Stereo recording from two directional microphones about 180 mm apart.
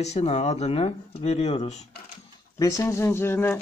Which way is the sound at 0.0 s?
35° left (ahead or behind).